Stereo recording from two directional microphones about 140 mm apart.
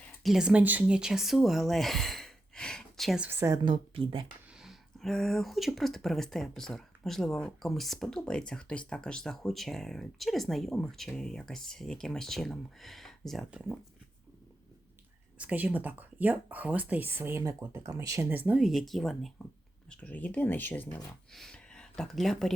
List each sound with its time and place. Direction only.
0.2 s speech: centre (ahead or behind)
3.2 s speech: 15° right (ahead or behind)
3.5 s speech: 35° right (ahead or behind)
4.5 s speech: centre (ahead or behind)
15.4 s speech: 10° right (ahead or behind)
18.3 s speech: 10° right (ahead or behind)